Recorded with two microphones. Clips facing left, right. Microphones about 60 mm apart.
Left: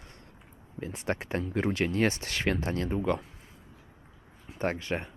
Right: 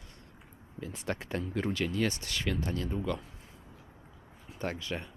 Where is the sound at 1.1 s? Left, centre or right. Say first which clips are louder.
Left 3 dB; left.